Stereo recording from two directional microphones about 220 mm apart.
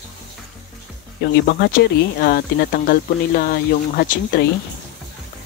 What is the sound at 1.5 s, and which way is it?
Speech, 45° left (ahead or behind).